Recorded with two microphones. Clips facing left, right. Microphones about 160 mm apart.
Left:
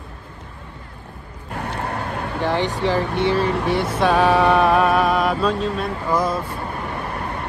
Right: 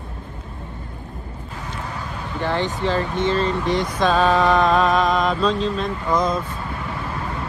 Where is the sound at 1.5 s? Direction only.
65° left (ahead or behind).